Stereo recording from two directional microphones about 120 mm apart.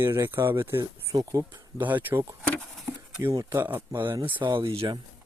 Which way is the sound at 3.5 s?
15° right (ahead or behind).